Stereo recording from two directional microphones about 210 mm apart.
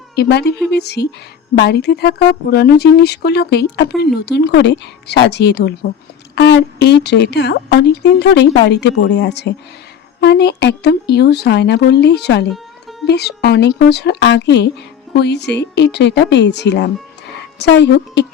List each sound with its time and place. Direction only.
0.2 s a woman's voice: 50° left (ahead or behind)